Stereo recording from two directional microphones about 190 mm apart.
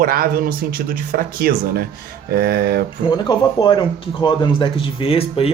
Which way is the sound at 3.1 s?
25° left (ahead or behind).